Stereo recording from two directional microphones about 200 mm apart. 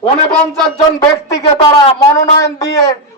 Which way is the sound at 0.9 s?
15° left (ahead or behind).